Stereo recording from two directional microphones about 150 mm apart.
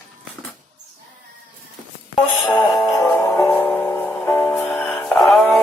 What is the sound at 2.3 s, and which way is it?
Music, centre (ahead or behind).